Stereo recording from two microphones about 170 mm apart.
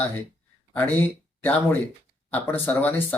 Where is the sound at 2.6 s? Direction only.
10° left (ahead or behind).